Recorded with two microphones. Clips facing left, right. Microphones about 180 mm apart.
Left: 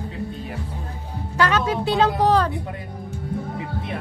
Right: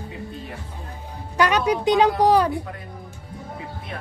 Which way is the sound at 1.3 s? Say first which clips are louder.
Right 1 dB; 15° right (ahead or behind).